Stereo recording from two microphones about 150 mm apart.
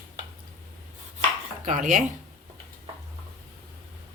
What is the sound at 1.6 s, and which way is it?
Speech, 55° right (ahead or behind).